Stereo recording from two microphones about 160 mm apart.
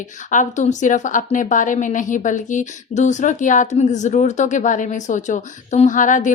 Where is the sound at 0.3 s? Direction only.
50° left (ahead or behind).